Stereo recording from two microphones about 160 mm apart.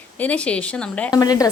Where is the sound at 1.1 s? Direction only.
20° left (ahead or behind).